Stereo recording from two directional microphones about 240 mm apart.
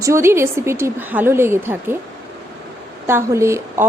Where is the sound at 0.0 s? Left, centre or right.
Centre.